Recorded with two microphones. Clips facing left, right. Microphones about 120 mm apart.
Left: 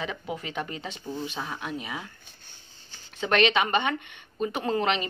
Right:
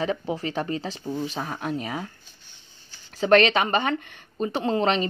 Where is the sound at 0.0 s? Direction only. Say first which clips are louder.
Right 7 dB; 35° right (ahead or behind).